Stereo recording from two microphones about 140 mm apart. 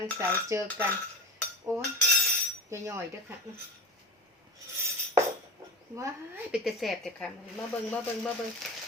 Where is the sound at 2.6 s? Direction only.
20° right (ahead or behind).